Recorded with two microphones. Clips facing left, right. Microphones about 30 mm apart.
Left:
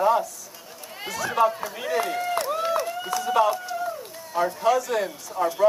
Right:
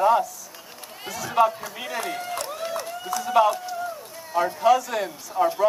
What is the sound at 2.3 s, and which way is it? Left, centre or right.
Run, centre.